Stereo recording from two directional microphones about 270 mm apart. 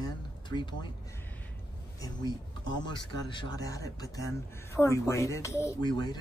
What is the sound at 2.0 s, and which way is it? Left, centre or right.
Speech, centre.